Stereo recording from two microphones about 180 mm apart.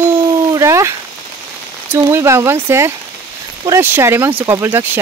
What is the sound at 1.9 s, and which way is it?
Speech, 15° right (ahead or behind).